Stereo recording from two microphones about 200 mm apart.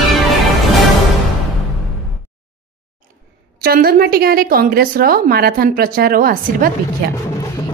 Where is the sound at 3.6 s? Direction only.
50° right (ahead or behind).